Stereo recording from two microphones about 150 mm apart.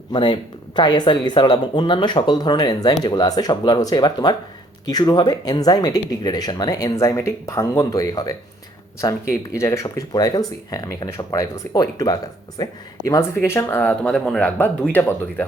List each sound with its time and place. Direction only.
0.1 s speech: 30° left (ahead or behind); by 15.4 s 10° left (ahead or behind)